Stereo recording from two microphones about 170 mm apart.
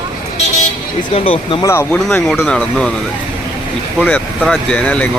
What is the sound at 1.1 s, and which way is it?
Speech, 35° left (ahead or behind).